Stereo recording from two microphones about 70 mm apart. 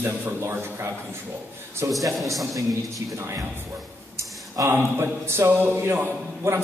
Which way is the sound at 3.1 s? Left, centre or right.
Right.